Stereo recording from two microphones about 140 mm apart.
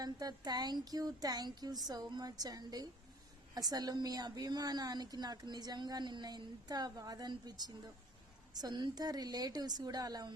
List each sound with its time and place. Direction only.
0.0 s a woman's voice: 30° right (ahead or behind)